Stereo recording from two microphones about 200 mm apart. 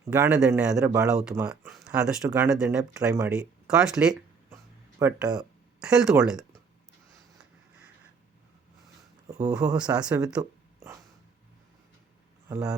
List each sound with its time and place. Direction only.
0.0 s speech: 10° right (ahead or behind)
9.4 s speech: 5° right (ahead or behind)
12.5 s speech: 10° right (ahead or behind)